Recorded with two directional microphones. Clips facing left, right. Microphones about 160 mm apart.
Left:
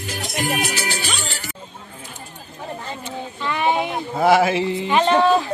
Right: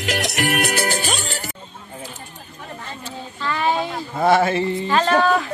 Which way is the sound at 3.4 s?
15° left (ahead or behind).